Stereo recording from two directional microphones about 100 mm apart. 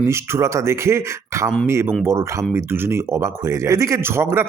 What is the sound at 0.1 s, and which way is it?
Speech, 30° right (ahead or behind).